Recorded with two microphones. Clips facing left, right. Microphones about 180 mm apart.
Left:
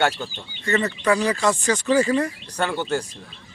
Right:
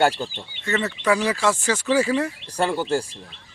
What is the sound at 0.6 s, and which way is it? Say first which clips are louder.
Speech: left 2 dB; 5° right (ahead or behind).